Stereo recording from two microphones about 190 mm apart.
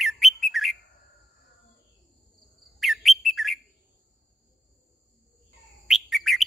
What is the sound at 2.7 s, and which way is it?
Bird, centre (ahead or behind).